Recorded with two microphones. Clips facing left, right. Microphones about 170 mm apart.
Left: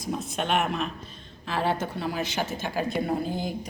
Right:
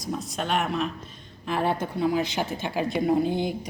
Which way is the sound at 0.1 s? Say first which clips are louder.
Left 1 dB; 5° left (ahead or behind).